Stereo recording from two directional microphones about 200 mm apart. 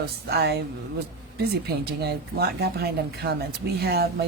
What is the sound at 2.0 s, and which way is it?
Speech, 50° right (ahead or behind).